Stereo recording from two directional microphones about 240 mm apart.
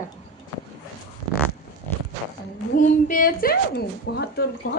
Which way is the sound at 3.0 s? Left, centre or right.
Left.